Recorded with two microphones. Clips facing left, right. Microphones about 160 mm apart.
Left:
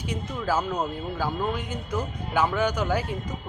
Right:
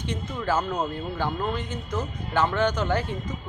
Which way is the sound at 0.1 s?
10° left (ahead or behind).